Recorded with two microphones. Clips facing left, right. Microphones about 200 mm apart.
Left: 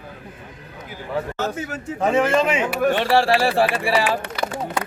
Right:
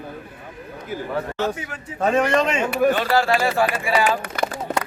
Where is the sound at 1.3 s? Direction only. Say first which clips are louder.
Right 1 dB; 45° left (ahead or behind).